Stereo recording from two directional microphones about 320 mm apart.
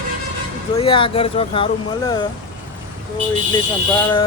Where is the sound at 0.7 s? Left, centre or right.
Centre.